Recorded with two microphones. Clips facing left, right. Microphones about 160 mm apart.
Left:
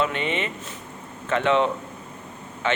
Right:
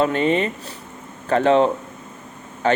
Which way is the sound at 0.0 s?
40° right (ahead or behind).